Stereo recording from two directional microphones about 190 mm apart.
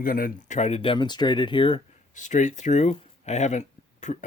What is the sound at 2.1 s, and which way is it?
Speech, 40° left (ahead or behind).